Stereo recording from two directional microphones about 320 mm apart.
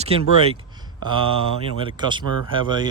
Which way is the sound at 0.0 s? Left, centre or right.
Centre.